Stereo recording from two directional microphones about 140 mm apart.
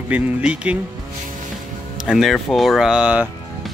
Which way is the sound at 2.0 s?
Centre (ahead or behind).